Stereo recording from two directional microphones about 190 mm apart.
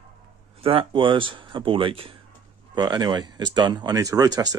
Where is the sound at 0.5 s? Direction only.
30° right (ahead or behind).